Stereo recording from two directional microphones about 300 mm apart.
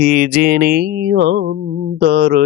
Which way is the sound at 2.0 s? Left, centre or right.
Right.